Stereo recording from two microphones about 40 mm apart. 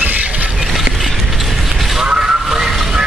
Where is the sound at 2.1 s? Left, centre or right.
Centre.